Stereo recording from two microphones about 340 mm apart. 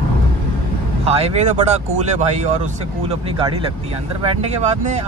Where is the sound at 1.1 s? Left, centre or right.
Centre.